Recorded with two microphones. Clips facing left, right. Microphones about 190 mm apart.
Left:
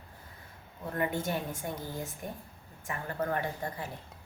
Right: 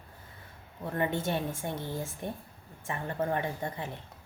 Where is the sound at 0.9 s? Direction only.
25° right (ahead or behind).